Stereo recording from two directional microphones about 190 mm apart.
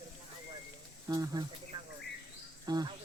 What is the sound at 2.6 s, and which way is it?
Insect, 20° right (ahead or behind).